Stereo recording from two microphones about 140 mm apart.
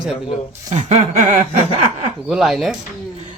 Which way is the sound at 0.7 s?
50° right (ahead or behind).